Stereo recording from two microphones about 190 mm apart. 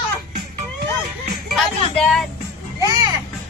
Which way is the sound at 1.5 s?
5° left (ahead or behind).